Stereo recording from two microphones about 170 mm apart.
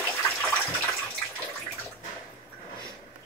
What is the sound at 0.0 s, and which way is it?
Water, 10° left (ahead or behind).